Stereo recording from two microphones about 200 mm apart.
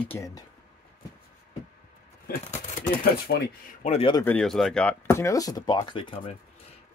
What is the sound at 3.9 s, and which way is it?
Speech, 25° left (ahead or behind).